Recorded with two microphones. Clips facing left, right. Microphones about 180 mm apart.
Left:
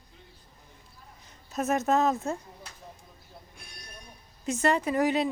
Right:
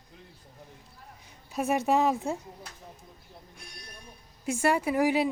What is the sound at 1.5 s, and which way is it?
Speech, 10° right (ahead or behind).